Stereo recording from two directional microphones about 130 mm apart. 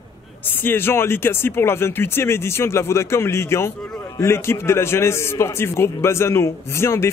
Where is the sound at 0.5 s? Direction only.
15° left (ahead or behind).